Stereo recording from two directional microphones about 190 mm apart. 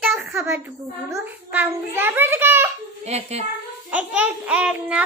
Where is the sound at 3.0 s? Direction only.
35° right (ahead or behind).